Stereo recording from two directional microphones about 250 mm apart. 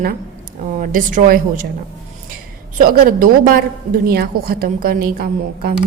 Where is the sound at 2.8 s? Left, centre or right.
Right.